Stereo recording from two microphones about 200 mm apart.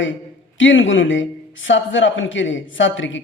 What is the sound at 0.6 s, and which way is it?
A man's voice, 70° left (ahead or behind).